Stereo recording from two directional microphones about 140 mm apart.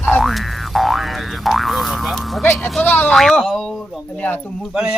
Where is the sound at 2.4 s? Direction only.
15° left (ahead or behind); by 5.0 s 5° right (ahead or behind).